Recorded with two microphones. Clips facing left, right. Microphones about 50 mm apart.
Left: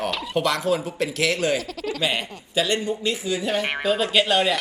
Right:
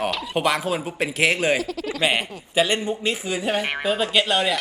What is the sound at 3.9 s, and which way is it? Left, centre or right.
Speech, centre.